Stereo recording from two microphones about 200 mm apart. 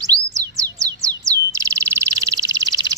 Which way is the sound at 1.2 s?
15° right (ahead or behind).